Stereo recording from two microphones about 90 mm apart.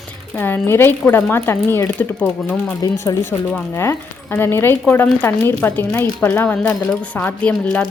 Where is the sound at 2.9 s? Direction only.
30° left (ahead or behind).